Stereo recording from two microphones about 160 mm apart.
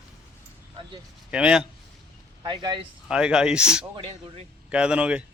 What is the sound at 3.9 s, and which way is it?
Speech, 40° right (ahead or behind).